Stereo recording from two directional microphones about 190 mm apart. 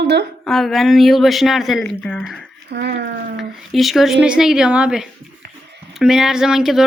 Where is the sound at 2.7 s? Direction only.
60° right (ahead or behind).